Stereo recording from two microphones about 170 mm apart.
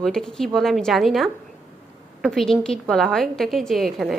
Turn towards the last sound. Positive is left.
turn(degrees=0)  # may be behind; listen again after turning